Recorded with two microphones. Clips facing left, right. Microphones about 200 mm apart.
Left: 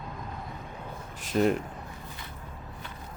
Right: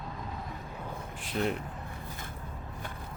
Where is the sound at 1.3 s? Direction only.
45° left (ahead or behind).